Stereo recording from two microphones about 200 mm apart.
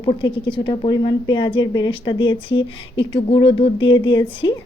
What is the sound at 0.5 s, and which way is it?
A woman's voice, 25° left (ahead or behind).